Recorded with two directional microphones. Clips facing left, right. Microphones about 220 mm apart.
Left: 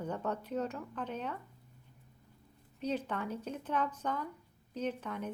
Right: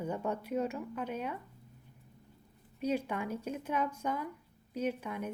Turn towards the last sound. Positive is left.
turn(degrees=-10)  # may be behind; listen again after turning